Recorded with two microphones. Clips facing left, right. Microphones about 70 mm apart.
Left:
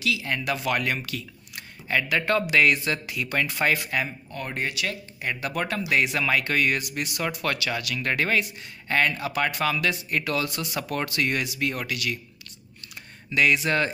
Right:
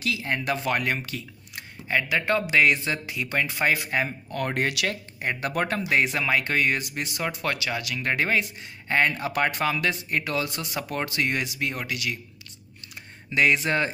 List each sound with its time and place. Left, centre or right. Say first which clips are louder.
0.0 s speech: even; right
4.6 s speech: right 1 dB; right
4.8 s speech: right 2 dB; right
5.9 s speech: even; right
13.3 s speech: even; right